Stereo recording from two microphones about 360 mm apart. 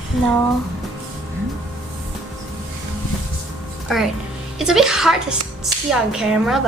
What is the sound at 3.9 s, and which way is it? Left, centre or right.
A woman's voice, centre.